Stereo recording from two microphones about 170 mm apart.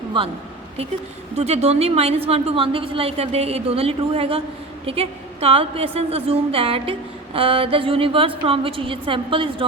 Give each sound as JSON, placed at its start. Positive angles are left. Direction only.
{"t": 1.4, "sound": "a woman's voice", "side_deg": -40}